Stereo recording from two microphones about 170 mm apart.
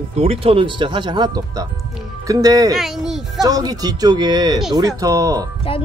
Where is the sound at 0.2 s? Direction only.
35° right (ahead or behind).